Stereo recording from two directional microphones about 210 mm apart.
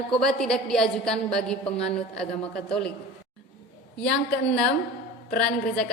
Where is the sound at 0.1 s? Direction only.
Centre (ahead or behind).